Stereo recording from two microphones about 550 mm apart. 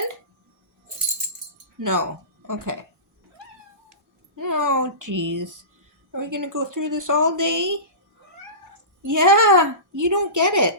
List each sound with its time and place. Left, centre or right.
1.8 s a woman's voice: right
4.4 s a woman's voice: right
9.0 s a woman's voice: right